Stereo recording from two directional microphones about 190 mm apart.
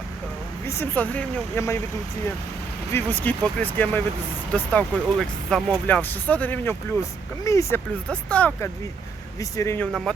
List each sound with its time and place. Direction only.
0.6 s speech: 15° left (ahead or behind)
2.9 s speech: 10° left (ahead or behind)